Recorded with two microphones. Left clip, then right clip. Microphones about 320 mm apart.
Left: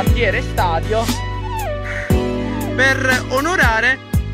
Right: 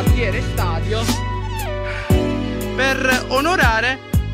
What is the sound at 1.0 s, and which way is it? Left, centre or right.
Music, centre.